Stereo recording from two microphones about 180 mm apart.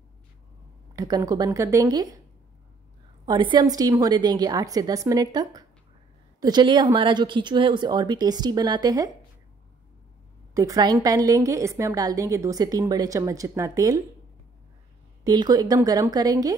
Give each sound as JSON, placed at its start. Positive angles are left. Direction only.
{"t": 0.9, "sound": "a woman's voice", "side_deg": -20}
{"t": 3.3, "sound": "a woman's voice", "side_deg": -25}
{"t": 10.5, "sound": "a woman's voice", "side_deg": -20}
{"t": 15.2, "sound": "a woman's voice", "side_deg": -20}